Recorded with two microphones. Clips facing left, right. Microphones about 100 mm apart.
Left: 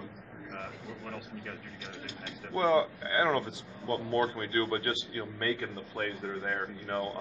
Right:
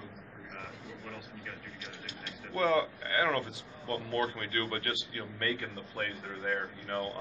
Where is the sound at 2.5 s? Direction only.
20° left (ahead or behind).